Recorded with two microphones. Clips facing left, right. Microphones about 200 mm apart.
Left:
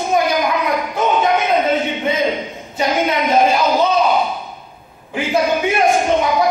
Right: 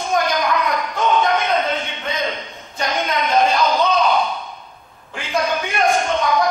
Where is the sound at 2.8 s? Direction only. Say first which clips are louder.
Left 5 dB; 10° left (ahead or behind).